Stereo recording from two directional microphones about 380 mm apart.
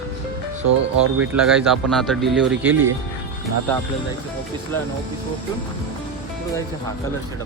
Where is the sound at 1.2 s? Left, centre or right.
Centre.